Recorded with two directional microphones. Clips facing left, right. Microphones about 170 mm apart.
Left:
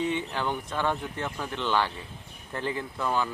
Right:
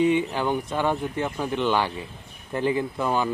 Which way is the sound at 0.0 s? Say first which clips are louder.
Right 7 dB; 15° right (ahead or behind).